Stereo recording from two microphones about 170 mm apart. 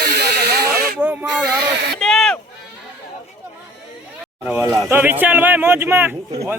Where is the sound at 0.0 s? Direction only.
70° right (ahead or behind).